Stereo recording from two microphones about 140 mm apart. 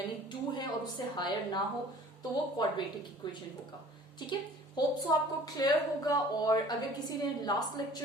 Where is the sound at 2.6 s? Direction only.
30° left (ahead or behind).